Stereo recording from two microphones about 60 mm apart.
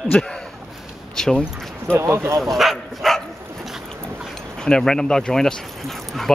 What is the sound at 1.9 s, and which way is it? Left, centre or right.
Speech, right.